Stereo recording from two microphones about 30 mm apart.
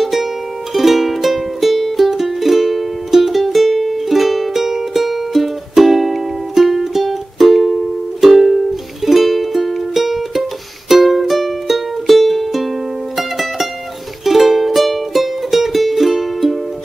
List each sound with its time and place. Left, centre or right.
0.0 s music: centre